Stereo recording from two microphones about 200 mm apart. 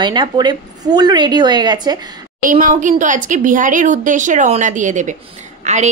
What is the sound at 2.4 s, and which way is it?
A woman's voice, 40° right (ahead or behind).